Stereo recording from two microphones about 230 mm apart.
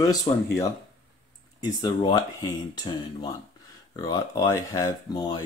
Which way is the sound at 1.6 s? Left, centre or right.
Centre.